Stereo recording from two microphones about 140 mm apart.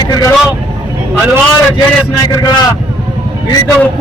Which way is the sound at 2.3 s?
25° left (ahead or behind).